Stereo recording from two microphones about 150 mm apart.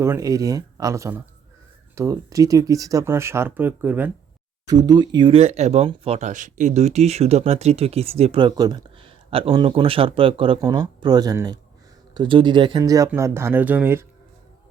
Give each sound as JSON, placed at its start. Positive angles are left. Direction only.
{"t": 0.0, "sound": "speech", "side_deg": -20}
{"t": 4.6, "sound": "speech", "side_deg": -25}